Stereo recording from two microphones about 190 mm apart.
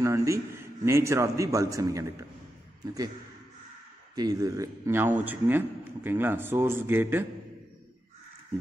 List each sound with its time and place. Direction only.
0.0 s a man's voice: 15° right (ahead or behind)
4.1 s a man's voice: 20° right (ahead or behind)